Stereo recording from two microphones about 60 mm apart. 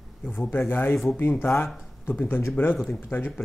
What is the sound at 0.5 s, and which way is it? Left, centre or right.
Speech, left.